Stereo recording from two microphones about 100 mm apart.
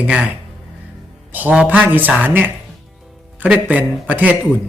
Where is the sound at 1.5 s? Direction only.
15° right (ahead or behind).